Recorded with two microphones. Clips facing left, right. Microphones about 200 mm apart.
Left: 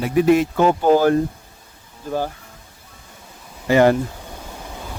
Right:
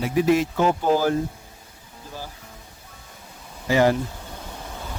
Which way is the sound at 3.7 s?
60° left (ahead or behind).